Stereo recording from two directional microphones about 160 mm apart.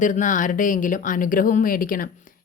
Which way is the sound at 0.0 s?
50° left (ahead or behind).